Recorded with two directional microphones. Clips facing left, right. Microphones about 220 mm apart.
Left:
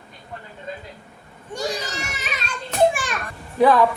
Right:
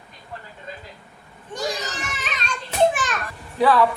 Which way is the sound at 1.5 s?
10° left (ahead or behind).